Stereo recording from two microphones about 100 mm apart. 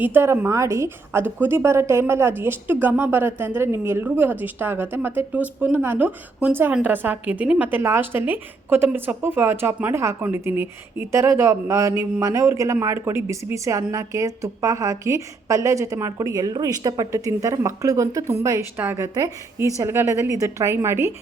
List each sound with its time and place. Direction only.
0.0 s a woman's voice: 20° right (ahead or behind)
7.7 s a woman's voice: 25° right (ahead or behind)